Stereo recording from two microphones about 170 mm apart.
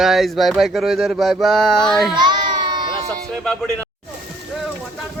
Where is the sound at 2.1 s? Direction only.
25° right (ahead or behind).